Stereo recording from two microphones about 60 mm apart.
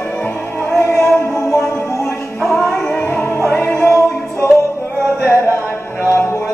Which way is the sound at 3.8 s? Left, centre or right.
Left.